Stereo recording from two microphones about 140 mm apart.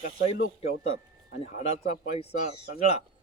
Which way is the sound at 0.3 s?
50° left (ahead or behind).